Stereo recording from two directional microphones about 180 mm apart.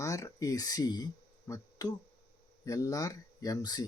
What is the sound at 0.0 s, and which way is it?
Speech, 20° left (ahead or behind).